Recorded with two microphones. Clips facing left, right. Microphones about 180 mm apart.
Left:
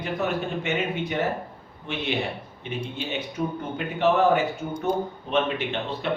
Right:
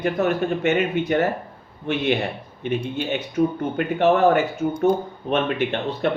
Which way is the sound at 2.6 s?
55° right (ahead or behind).